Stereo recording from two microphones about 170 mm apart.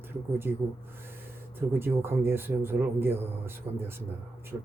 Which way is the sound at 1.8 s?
15° right (ahead or behind).